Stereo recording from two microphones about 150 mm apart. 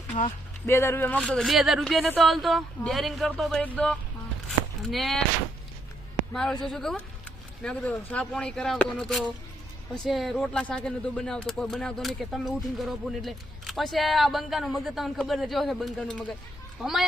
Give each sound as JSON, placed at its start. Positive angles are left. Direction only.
{"t": 0.1, "sound": "speech", "side_deg": 40}
{"t": 0.7, "sound": "speech", "side_deg": 15}
{"t": 4.4, "sound": "a sound", "side_deg": 0}
{"t": 6.3, "sound": "speech", "side_deg": 5}